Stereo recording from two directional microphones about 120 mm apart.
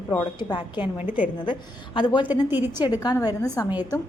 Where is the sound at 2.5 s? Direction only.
15° right (ahead or behind).